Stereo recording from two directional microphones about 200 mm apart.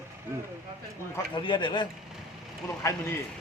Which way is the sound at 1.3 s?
25° left (ahead or behind).